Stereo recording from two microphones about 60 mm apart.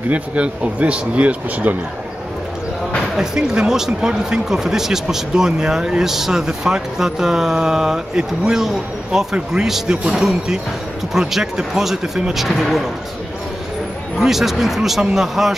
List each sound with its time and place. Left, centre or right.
0.1 s speech: right
3.2 s speech: centre
14.1 s speech: centre